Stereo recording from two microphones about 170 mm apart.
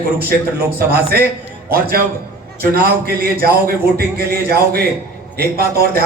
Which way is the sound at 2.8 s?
65° right (ahead or behind).